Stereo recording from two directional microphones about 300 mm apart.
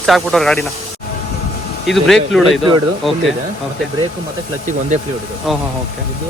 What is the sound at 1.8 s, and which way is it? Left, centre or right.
Speech, centre.